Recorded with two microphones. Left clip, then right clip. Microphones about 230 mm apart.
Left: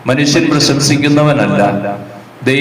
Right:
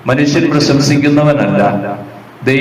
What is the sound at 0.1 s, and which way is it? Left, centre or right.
A man's voice, left.